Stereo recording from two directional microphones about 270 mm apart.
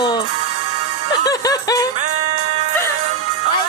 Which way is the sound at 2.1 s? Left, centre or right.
Right.